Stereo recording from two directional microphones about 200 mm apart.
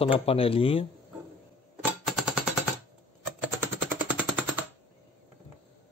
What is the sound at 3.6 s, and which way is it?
Machine gun, 10° right (ahead or behind).